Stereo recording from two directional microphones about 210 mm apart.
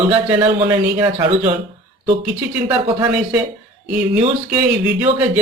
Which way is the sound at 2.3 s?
10° right (ahead or behind).